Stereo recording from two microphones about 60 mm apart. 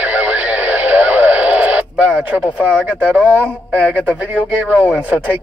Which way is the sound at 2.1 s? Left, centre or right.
Right.